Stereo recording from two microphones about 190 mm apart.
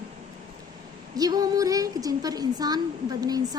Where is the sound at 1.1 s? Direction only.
20° right (ahead or behind).